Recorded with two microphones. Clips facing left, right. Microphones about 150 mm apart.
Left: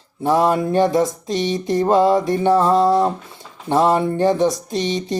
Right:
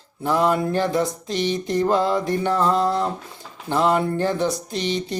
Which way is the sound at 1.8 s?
20° left (ahead or behind).